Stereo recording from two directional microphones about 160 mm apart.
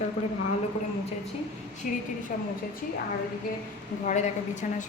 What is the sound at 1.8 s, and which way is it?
Speech, 55° left (ahead or behind).